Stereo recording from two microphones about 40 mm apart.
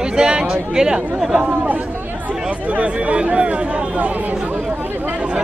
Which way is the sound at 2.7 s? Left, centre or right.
Right.